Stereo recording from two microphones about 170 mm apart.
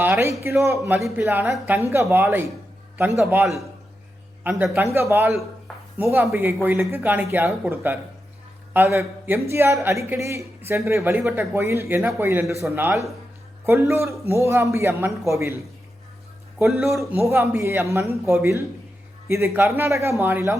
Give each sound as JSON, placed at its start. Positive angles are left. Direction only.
{"t": 0.0, "sound": "a man's voice", "side_deg": -15}
{"t": 4.4, "sound": "a man's voice", "side_deg": -10}
{"t": 16.6, "sound": "speech", "side_deg": 0}
{"t": 16.9, "sound": "a man's voice", "side_deg": -15}